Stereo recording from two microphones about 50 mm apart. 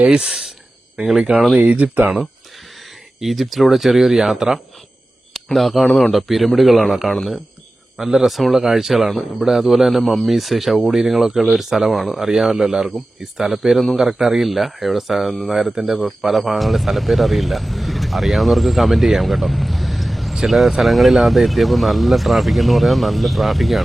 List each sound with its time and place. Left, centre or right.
0.0 s speech: centre
1.5 s speech: right
3.2 s speech: centre